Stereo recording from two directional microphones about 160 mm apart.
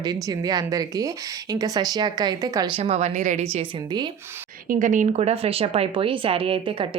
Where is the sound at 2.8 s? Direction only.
40° right (ahead or behind).